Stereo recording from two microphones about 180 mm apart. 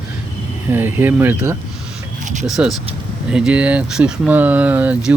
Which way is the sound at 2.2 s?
45° right (ahead or behind).